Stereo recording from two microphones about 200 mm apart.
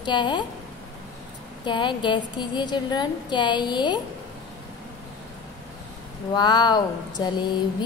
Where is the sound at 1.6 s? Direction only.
25° left (ahead or behind).